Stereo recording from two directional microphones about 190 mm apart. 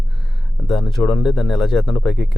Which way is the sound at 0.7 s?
Centre (ahead or behind).